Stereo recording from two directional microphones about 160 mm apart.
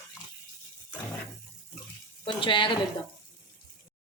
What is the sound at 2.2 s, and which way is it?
Speech, 30° left (ahead or behind).